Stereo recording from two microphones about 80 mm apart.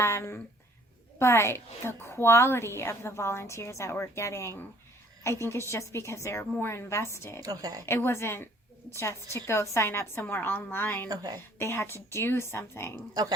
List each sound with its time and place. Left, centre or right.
0.0 s a woman's voice: left
7.4 s a woman's voice: right
7.9 s a woman's voice: left
11.1 s a woman's voice: right
11.6 s a woman's voice: left